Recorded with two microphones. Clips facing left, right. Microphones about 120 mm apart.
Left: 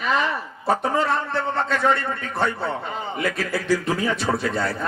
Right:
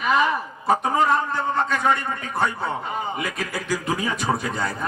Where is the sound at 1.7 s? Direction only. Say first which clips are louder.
Left 1 dB; 15° right (ahead or behind).